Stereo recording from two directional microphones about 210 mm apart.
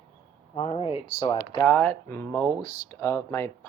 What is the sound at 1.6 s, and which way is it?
Speech, 5° left (ahead or behind).